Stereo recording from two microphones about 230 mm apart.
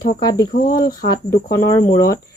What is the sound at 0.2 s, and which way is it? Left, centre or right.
Speech, centre.